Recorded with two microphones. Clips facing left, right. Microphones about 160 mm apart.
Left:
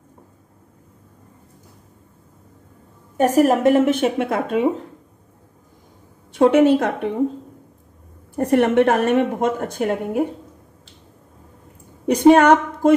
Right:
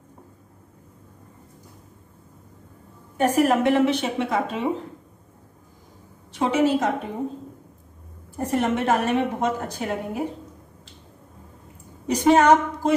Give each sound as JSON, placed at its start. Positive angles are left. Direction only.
{"t": 3.2, "sound": "a woman's voice", "side_deg": 40}
{"t": 6.3, "sound": "a woman's voice", "side_deg": 55}
{"t": 8.4, "sound": "a woman's voice", "side_deg": 65}
{"t": 12.1, "sound": "a woman's voice", "side_deg": 60}